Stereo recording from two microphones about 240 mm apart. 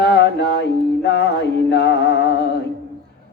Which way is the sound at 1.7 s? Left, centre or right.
Left.